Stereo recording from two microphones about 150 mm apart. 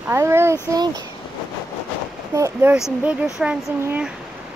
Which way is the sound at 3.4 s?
5° right (ahead or behind).